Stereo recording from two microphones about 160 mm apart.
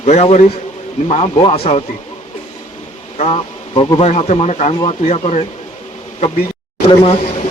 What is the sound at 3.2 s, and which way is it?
Speech, 35° left (ahead or behind).